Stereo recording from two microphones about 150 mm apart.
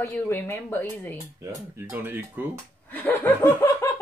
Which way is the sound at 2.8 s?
10° left (ahead or behind).